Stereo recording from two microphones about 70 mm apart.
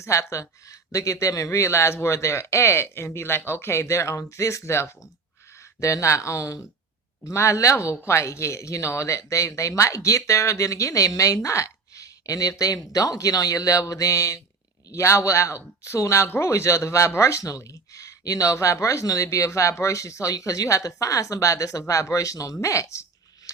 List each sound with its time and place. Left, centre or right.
0.0 s speech: left